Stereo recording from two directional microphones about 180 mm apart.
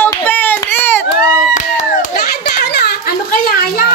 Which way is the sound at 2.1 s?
60° left (ahead or behind).